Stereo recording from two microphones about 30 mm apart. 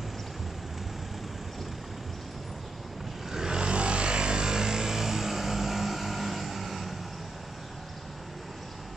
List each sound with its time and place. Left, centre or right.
3.3 s vehicle: centre
3.5 s vehicle: right; by 7.0 s centre